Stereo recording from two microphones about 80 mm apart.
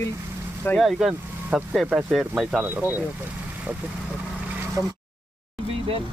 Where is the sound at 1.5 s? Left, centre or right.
Centre.